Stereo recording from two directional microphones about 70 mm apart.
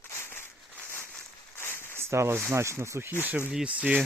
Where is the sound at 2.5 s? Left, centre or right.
Right.